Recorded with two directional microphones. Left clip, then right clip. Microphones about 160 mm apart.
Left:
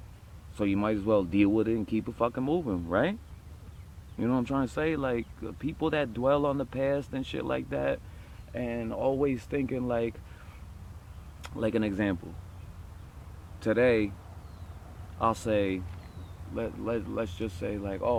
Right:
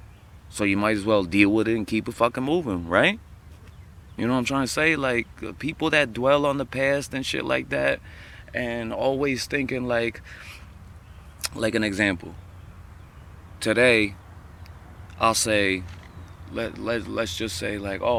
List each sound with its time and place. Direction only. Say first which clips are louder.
0.5 s speech: right 6 dB; 15° right (ahead or behind)
4.2 s speech: right 5 dB; 15° right (ahead or behind)
11.5 s speech: right 5 dB; 10° right (ahead or behind)
13.6 s speech: right 6 dB; 15° right (ahead or behind)
15.2 s speech: right 6 dB; 10° right (ahead or behind)